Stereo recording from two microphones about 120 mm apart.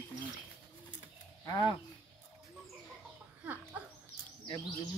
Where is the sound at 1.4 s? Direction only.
35° left (ahead or behind).